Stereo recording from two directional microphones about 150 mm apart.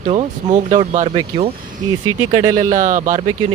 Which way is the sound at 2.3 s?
60° right (ahead or behind).